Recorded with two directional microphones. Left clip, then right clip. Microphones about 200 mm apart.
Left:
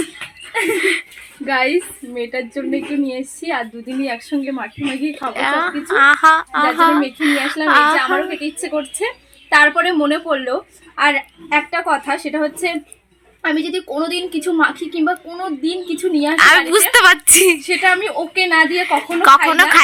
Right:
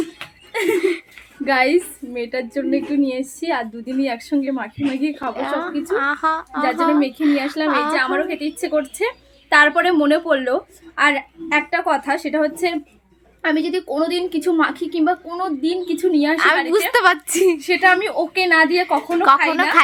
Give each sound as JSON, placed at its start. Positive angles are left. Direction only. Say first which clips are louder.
{"t": 0.8, "sound": "speech", "louder": "left 3 dB", "side_deg": 0}
{"t": 1.5, "sound": "a woman's voice", "louder": "even", "side_deg": -35}
{"t": 2.1, "sound": "a woman's voice", "louder": "left 1 dB", "side_deg": -20}
{"t": 5.3, "sound": "speech", "louder": "left 5 dB", "side_deg": 0}
{"t": 8.6, "sound": "a woman's voice", "louder": "right 2 dB", "side_deg": -20}
{"t": 16.3, "sound": "speech", "louder": "left 9 dB", "side_deg": 0}
{"t": 17.7, "sound": "a woman's voice", "louder": "even", "side_deg": -20}
{"t": 18.9, "sound": "speech", "louder": "left 4 dB", "side_deg": -5}